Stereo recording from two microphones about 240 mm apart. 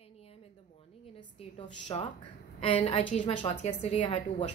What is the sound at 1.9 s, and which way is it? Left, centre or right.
A woman's voice, centre.